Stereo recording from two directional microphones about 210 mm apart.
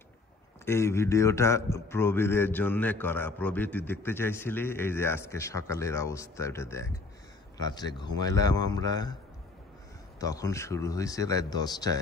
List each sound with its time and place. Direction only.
0.7 s a man's voice: 10° left (ahead or behind)
10.2 s a man's voice: 15° left (ahead or behind)